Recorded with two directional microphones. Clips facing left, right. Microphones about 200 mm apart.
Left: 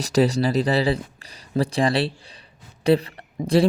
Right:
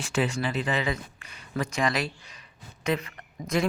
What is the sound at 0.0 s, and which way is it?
Speech, 35° left (ahead or behind).